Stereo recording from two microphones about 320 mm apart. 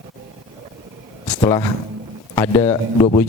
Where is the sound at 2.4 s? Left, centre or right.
Centre.